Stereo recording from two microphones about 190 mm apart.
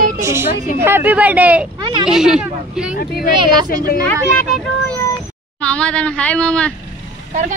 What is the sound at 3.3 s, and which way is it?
Speech, 25° right (ahead or behind).